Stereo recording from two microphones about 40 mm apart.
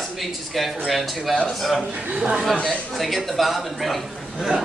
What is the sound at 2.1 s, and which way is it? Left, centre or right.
Speech, right.